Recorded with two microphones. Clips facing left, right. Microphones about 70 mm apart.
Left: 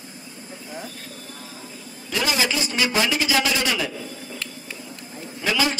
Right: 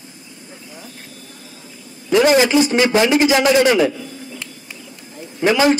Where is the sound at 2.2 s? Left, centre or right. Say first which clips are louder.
Right 11 dB; right.